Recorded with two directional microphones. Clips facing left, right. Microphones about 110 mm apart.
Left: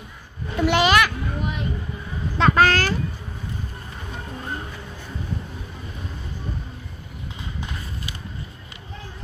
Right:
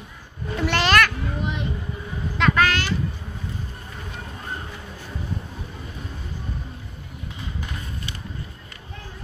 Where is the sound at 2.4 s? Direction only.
35° left (ahead or behind).